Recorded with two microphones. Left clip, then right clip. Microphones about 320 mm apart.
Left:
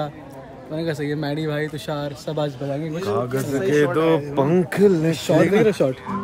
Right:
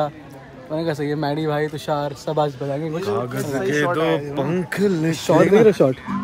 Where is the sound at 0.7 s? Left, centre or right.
Centre.